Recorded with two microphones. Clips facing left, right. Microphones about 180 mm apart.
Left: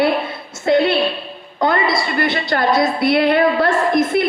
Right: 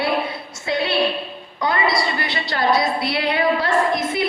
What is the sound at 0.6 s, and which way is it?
A woman's voice, 55° left (ahead or behind).